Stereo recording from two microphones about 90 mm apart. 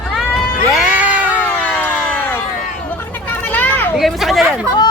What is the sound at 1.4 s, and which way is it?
Cat, 20° left (ahead or behind).